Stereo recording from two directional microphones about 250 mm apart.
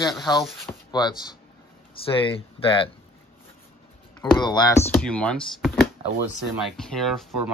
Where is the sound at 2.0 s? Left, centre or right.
Left.